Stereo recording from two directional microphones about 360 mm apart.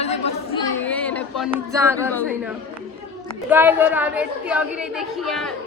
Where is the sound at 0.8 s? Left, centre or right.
Centre.